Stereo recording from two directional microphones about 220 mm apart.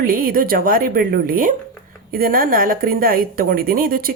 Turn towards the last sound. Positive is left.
turn(degrees=-40)  # may be behind; listen again after turning